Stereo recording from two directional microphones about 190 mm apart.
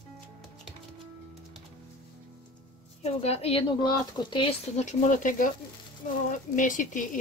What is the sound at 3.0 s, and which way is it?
Speech, 35° left (ahead or behind).